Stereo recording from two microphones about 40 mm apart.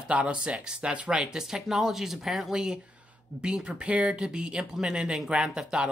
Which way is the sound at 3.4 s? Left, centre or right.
Right.